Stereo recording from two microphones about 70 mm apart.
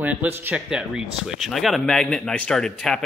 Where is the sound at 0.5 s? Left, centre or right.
Centre.